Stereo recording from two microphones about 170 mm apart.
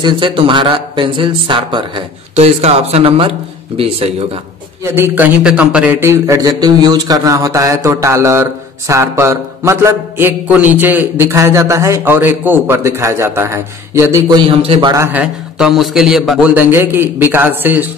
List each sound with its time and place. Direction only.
0.0 s speech: 30° right (ahead or behind)
2.3 s speech: 40° right (ahead or behind)
4.9 s speech: 15° right (ahead or behind)
14.2 s speech: 30° right (ahead or behind)
15.0 s speech: 5° right (ahead or behind)